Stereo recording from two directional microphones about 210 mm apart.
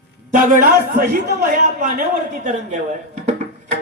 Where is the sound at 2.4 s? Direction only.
35° right (ahead or behind).